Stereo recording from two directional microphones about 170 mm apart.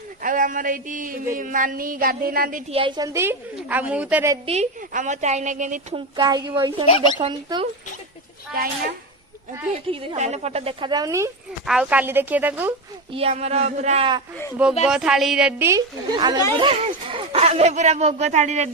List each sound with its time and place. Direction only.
0.2 s a sound: 50° right (ahead or behind)
2.6 s a woman's voice: 30° right (ahead or behind); by 4.4 s 10° right (ahead or behind)
4.4 s a sound: 40° right (ahead or behind)
5.9 s speech: 25° right (ahead or behind)
6.8 s speech: 35° left (ahead or behind)
7.2 s speech: 30° right (ahead or behind)
9.9 s a woman's voice: 30° right (ahead or behind)
11.6 s a woman's voice: 5° right (ahead or behind)
13.1 s a woman's voice: 35° right (ahead or behind)
14.8 s a woman's voice: 5° right (ahead or behind)
16.1 s speech: 25° right (ahead or behind); by 18.7 s 45° right (ahead or behind)